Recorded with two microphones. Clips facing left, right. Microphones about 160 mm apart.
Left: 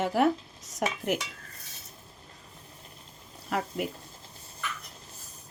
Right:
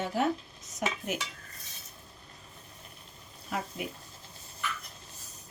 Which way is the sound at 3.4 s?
70° left (ahead or behind).